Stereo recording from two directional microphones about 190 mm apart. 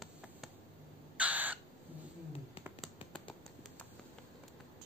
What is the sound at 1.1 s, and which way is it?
Crow, 10° right (ahead or behind).